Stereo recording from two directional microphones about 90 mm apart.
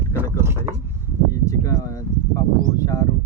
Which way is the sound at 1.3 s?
40° left (ahead or behind).